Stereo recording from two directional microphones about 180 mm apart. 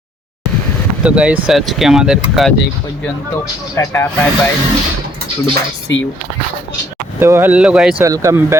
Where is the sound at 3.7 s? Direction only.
15° left (ahead or behind).